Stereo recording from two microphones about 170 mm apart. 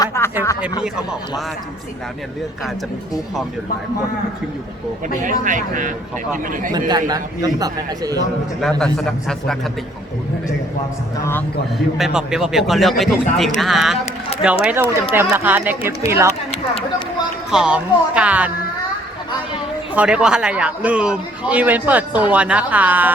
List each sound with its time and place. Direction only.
0.0 s speech: 15° left (ahead or behind)
5.2 s speech: 50° right (ahead or behind)
6.7 s a man's voice: 25° right (ahead or behind)
8.8 s a man's voice: 5° left (ahead or behind)
11.2 s speech: 15° left (ahead or behind)
11.9 s a man's voice: 5° right (ahead or behind)
17.5 s a man's voice: 5° right (ahead or behind)
19.9 s a man's voice: 10° right (ahead or behind)